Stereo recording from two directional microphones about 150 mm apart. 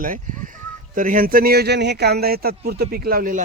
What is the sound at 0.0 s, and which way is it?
Speech, 60° right (ahead or behind).